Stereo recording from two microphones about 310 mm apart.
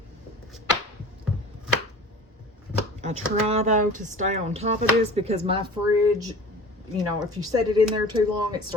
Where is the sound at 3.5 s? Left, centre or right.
Right.